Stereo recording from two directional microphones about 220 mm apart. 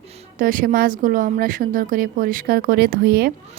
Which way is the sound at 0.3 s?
40° right (ahead or behind).